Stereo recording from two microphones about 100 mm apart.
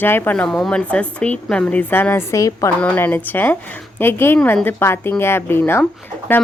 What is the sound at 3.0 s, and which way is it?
A woman's voice, 20° left (ahead or behind).